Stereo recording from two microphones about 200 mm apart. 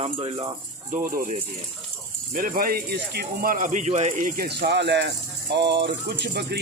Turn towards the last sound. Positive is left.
turn(degrees=-55)  # may be behind; listen again after turning